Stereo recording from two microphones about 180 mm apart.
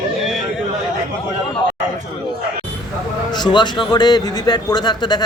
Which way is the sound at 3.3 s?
25° left (ahead or behind).